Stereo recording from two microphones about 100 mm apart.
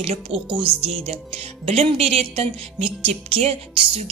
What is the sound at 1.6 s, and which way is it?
Music, 75° right (ahead or behind).